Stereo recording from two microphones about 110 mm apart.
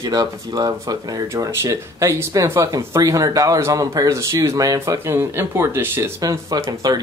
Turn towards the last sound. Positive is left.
turn(degrees=-35)  # may be behind; listen again after turning